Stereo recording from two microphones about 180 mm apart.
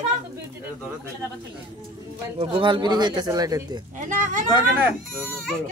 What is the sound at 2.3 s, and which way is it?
Speech, 30° right (ahead or behind).